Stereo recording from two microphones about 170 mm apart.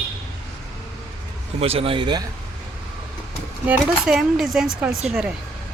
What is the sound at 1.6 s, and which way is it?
Speech, 35° right (ahead or behind).